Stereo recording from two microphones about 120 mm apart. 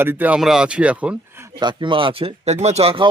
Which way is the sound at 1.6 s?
40° right (ahead or behind).